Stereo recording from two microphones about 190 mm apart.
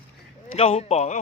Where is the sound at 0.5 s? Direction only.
30° left (ahead or behind).